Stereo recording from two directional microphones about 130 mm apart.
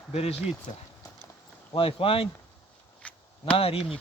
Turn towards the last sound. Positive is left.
turn(degrees=50)  # may be behind; listen again after turning